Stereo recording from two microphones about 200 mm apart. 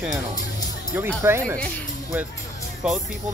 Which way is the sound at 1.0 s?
10° right (ahead or behind).